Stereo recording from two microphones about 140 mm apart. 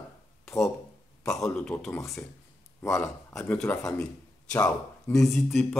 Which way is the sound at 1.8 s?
20° left (ahead or behind).